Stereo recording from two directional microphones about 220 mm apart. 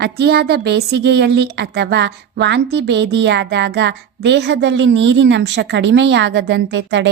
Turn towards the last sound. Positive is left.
turn(degrees=-55)  # may be behind; listen again after turning